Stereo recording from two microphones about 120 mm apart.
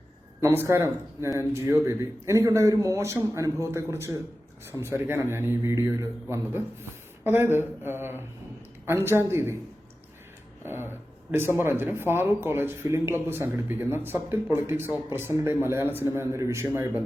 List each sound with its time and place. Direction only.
0.4 s speech: 20° right (ahead or behind)
10.6 s speech: 20° right (ahead or behind)